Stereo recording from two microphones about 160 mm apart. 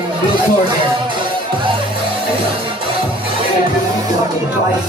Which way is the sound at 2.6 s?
35° right (ahead or behind).